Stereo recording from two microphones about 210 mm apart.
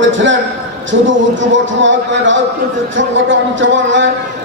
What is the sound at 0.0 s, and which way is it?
A man's voice, 60° right (ahead or behind).